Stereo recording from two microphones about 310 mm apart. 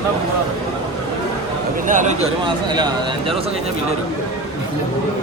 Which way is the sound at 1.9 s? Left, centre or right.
Right.